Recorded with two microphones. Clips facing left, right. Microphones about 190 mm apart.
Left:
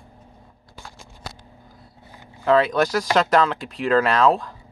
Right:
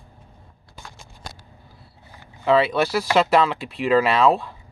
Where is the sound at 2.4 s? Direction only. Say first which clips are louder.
Even; 5° right (ahead or behind).